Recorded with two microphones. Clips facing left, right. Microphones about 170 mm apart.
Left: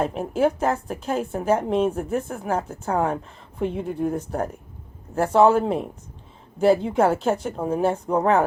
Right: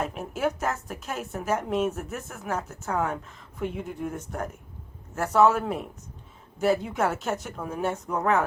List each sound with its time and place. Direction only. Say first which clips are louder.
0.0 s a woman's voice: left 7 dB; 30° left (ahead or behind)